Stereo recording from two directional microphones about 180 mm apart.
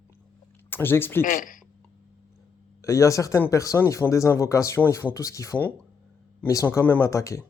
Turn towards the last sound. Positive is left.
turn(degrees=15)  # may be behind; listen again after turning